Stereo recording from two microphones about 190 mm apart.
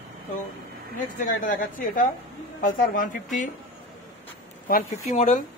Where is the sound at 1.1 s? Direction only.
45° left (ahead or behind).